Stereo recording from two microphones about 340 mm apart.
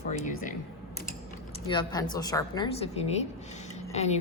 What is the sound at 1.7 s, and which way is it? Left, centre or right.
A woman's voice, centre.